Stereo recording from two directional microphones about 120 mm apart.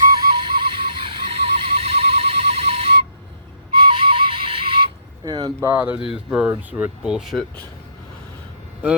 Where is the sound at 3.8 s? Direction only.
45° right (ahead or behind).